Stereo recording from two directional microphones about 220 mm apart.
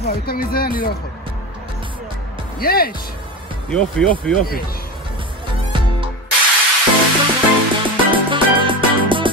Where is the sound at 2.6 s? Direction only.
45° left (ahead or behind).